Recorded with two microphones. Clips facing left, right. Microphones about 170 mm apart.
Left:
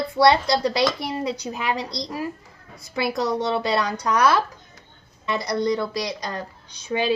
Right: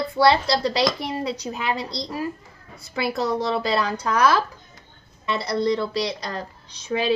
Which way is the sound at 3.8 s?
30° right (ahead or behind).